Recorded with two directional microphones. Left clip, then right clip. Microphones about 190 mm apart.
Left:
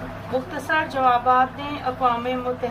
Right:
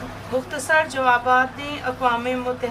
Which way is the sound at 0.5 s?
15° right (ahead or behind).